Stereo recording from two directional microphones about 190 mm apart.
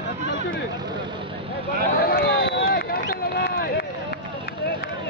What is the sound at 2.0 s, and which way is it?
Run, 55° left (ahead or behind).